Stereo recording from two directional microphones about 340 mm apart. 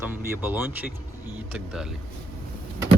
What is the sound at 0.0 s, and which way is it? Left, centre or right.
Speech, centre.